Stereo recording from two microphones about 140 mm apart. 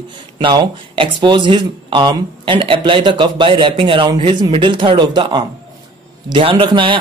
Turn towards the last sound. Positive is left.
turn(degrees=-35)  # may be behind; listen again after turning